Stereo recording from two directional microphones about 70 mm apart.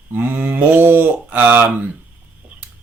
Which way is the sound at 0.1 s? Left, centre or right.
Right.